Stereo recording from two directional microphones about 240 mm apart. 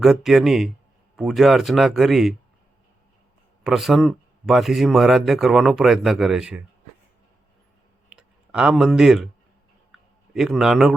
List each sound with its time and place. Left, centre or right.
0.0 s a man's voice: centre
3.6 s a man's voice: centre
8.1 s speech: centre
10.3 s a man's voice: centre